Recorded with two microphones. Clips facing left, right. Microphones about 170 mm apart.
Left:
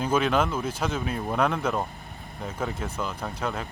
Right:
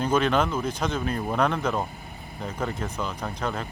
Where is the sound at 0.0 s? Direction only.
5° left (ahead or behind).